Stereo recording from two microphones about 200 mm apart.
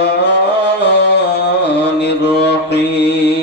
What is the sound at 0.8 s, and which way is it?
Music, 55° left (ahead or behind).